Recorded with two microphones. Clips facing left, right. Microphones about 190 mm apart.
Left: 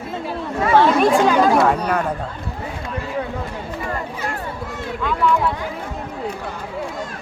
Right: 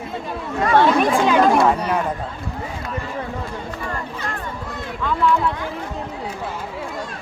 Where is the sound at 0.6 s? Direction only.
5° left (ahead or behind).